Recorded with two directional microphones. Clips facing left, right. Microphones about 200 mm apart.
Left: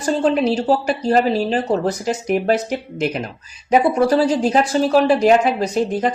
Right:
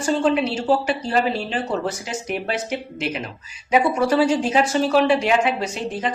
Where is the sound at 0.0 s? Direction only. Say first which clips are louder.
Left 2 dB; 40° left (ahead or behind).